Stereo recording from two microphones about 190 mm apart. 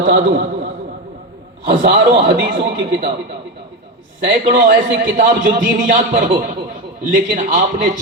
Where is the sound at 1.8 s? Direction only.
60° right (ahead or behind).